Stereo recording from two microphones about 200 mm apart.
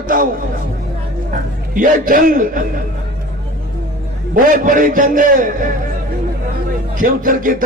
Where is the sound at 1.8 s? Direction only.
45° right (ahead or behind).